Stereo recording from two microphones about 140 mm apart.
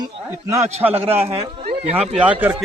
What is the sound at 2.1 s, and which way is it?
Speech, 10° right (ahead or behind).